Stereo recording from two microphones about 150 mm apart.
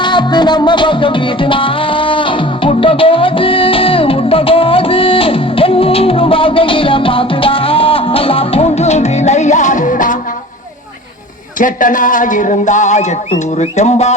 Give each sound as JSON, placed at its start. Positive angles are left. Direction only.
{"t": 0.0, "sound": "music", "side_deg": 30}
{"t": 11.5, "sound": "speech", "side_deg": 60}